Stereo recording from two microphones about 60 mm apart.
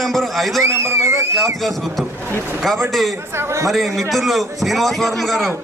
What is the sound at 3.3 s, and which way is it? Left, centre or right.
Speech, right.